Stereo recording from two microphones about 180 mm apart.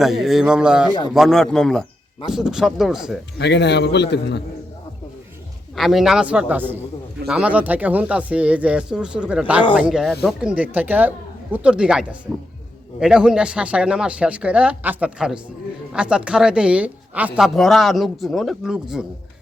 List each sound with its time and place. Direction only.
0.0 s a woman's voice: centre (ahead or behind)
3.3 s a man's voice: 75° left (ahead or behind)
5.7 s a woman's voice: centre (ahead or behind)